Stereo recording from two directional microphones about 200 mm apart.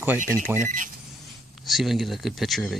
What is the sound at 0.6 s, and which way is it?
Speech, 40° right (ahead or behind).